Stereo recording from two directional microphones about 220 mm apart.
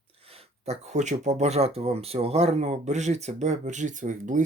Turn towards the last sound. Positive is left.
turn(degrees=-35)  # may be behind; listen again after turning